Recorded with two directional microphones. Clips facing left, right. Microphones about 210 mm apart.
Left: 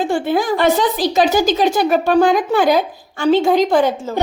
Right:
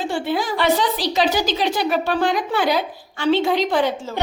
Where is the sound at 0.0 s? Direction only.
50° left (ahead or behind).